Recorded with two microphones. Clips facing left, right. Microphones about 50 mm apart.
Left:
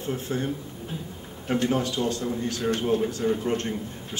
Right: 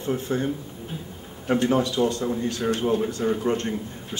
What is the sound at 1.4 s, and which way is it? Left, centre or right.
A man's voice, centre.